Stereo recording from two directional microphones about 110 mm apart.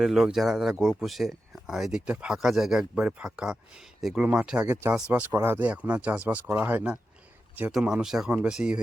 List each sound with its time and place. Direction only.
0.0 s speech: 5° right (ahead or behind)